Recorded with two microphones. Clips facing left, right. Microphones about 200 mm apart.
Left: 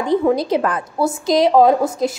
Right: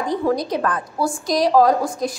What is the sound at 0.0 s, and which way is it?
A woman's voice, 25° left (ahead or behind).